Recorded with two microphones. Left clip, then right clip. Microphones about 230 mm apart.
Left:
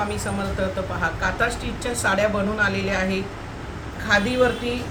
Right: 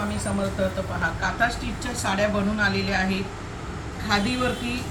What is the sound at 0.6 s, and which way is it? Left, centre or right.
A woman's voice, left.